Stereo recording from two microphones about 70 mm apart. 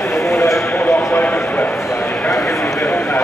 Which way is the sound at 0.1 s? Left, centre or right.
Left.